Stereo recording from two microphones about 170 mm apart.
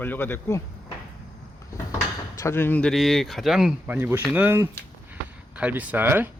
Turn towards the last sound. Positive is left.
turn(degrees=-10)  # may be behind; listen again after turning